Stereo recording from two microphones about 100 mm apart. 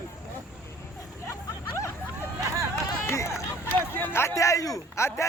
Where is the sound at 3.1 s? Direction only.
30° left (ahead or behind).